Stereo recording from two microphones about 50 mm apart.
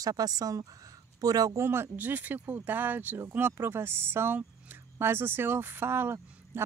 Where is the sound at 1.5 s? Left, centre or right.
Right.